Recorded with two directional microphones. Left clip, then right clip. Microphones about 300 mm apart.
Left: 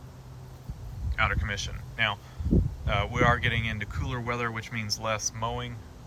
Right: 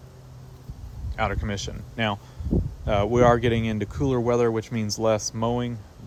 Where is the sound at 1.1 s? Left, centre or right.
Centre.